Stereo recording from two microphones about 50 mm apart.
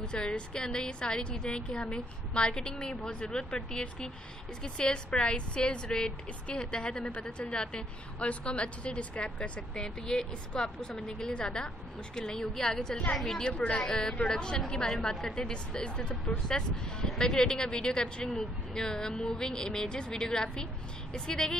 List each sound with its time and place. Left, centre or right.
0.0 s a woman's voice: centre